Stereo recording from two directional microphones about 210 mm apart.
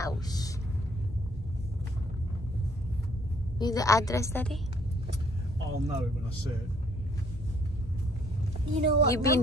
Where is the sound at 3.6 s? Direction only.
15° left (ahead or behind).